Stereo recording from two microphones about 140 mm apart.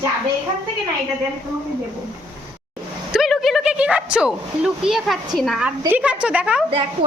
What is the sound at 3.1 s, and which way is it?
A woman's voice, centre (ahead or behind).